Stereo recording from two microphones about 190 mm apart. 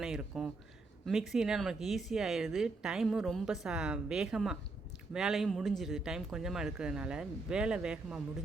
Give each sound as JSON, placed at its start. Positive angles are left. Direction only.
{"t": 0.0, "sound": "speech", "side_deg": 0}